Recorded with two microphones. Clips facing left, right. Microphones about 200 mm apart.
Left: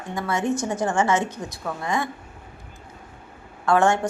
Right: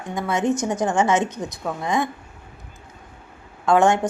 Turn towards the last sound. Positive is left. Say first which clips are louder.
# right 2 dB
turn(degrees=-15)  # may be behind; listen again after turning